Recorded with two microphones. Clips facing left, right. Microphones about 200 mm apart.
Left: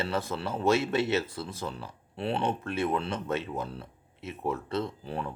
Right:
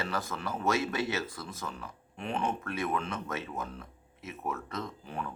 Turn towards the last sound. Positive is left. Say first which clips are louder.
# left 5 dB
turn(degrees=35)  # may be behind; listen again after turning